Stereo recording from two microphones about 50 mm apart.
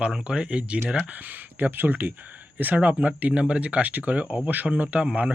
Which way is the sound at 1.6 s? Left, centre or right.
Right.